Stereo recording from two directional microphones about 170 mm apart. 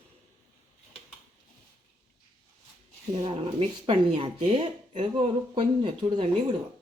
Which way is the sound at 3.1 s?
35° right (ahead or behind).